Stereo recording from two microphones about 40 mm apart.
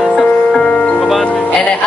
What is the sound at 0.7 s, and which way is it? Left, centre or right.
Music, left.